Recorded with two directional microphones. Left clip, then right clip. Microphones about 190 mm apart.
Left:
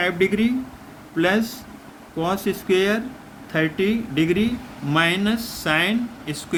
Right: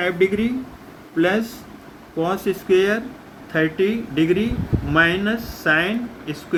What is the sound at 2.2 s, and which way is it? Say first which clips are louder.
Speech: right 2 dB; 60° left (ahead or behind).